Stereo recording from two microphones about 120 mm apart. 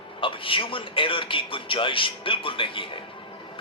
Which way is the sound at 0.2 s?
45° left (ahead or behind).